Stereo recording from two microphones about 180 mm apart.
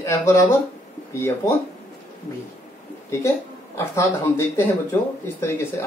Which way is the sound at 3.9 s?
15° left (ahead or behind).